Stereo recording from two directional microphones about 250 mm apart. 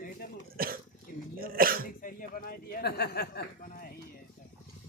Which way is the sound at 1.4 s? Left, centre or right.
Right.